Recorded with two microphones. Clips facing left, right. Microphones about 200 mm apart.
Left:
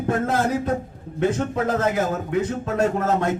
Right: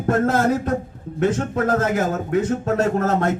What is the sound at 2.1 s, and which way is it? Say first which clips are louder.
Speech: right 3 dB; 50° right (ahead or behind).